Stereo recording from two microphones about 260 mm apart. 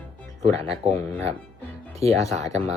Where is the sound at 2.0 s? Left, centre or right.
Right.